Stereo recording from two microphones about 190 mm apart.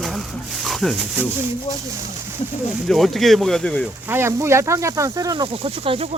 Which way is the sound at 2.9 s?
Centre (ahead or behind).